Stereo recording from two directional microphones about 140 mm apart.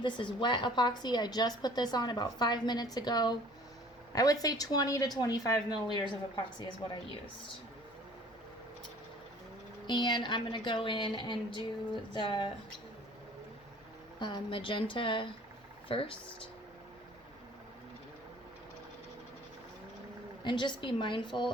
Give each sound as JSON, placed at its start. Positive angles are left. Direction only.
{"t": 0.0, "sound": "a woman's voice", "side_deg": 35}
{"t": 9.8, "sound": "a woman's voice", "side_deg": 30}
{"t": 14.2, "sound": "a woman's voice", "side_deg": 35}
{"t": 20.4, "sound": "a woman's voice", "side_deg": 35}